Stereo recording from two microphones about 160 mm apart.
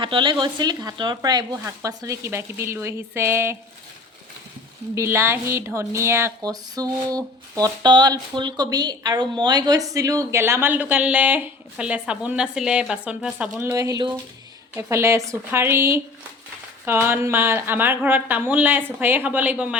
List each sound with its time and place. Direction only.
0.0 s speech: 30° right (ahead or behind); by 3.6 s 15° right (ahead or behind)
4.9 s a woman's voice: 15° right (ahead or behind)
13.7 s a woman's voice: 20° right (ahead or behind)